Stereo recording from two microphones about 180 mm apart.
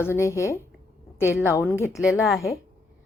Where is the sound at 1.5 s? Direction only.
15° left (ahead or behind).